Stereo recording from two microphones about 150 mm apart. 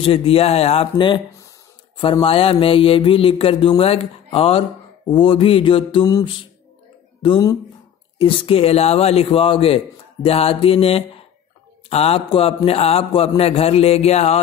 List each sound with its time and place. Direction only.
0.0 s mantra: 40° left (ahead or behind)
7.2 s speech: 30° left (ahead or behind)
8.2 s mantra: 40° left (ahead or behind)
13.4 s a man's voice: 40° left (ahead or behind)